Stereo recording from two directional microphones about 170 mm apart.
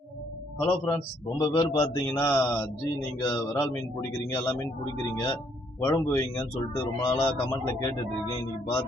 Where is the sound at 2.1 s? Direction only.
10° left (ahead or behind).